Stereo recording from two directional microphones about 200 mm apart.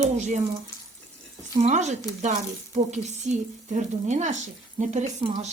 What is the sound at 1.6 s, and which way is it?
Speech, 35° right (ahead or behind).